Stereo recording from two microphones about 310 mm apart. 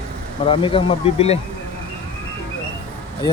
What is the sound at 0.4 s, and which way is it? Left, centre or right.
Speech, centre.